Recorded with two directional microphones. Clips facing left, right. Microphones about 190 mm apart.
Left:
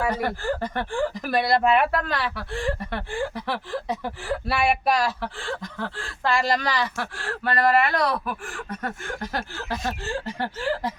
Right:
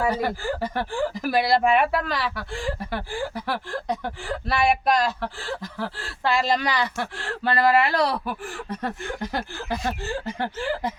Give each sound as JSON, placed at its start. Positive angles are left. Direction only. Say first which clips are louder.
{"t": 0.1, "sound": "speech", "louder": "even", "side_deg": -5}
{"t": 6.6, "sound": "speech", "louder": "right 1 dB", "side_deg": -15}
{"t": 9.3, "sound": "chuckle", "louder": "right 1 dB", "side_deg": -15}